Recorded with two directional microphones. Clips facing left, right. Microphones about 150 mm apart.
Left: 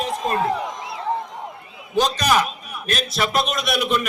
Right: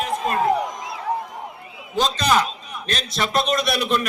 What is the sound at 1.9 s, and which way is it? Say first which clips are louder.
A man's voice: left 1 dB; 15° left (ahead or behind).